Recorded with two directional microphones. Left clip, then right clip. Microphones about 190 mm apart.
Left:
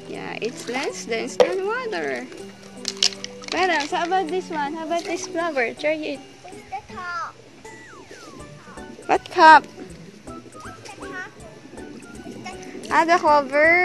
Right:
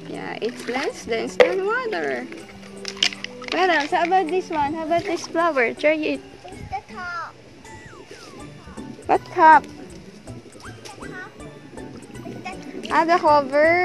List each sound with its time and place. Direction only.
0.1 s speech: centre (ahead or behind)
2.8 s music: 20° left (ahead or behind)
3.5 s speech: 5° right (ahead or behind); by 6.1 s 20° right (ahead or behind)
6.7 s children playing: 30° left (ahead or behind)
9.3 s speech: 10° left (ahead or behind)
12.4 s speech: centre (ahead or behind)